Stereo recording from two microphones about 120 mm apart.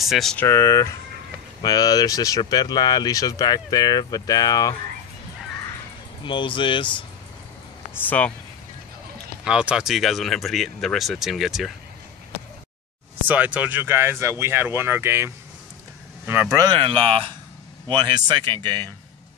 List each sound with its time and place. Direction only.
0.0 s speech: centre (ahead or behind)
0.4 s speech: 20° left (ahead or behind)
6.2 s speech: 45° left (ahead or behind)
9.4 s speech: 10° right (ahead or behind)
13.3 s speech: 10° right (ahead or behind)
16.5 s speech: 35° right (ahead or behind)
16.8 s speech: 50° right (ahead or behind)
17.8 s speech: 35° right (ahead or behind)